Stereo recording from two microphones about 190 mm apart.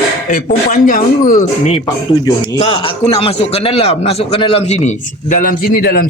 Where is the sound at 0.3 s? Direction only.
45° left (ahead or behind).